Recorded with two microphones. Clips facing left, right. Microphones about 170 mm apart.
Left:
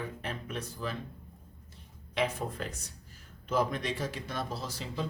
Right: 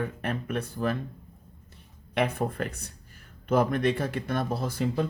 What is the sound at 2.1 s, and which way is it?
Speech, 60° right (ahead or behind).